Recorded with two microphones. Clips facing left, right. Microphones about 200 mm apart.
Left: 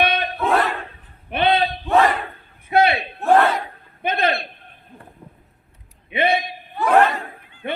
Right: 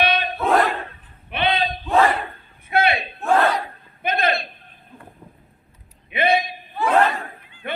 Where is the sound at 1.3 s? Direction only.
45° left (ahead or behind).